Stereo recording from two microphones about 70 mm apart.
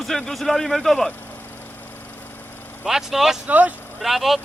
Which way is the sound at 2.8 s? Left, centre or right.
Centre.